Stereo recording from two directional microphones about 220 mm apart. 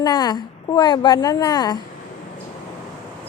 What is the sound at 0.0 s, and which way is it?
Speech, 20° left (ahead or behind).